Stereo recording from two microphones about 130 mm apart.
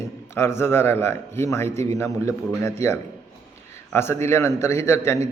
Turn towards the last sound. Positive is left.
turn(degrees=20)  # may be behind; listen again after turning